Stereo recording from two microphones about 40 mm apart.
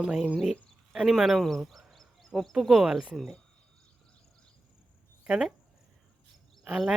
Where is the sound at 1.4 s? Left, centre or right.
Centre.